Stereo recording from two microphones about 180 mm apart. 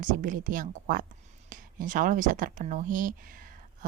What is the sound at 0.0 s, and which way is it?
Speech, 45° right (ahead or behind).